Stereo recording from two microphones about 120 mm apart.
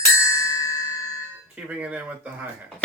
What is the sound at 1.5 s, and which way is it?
Speech, 10° right (ahead or behind).